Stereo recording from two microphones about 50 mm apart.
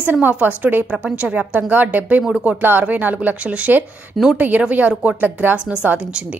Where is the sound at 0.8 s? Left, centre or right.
Right.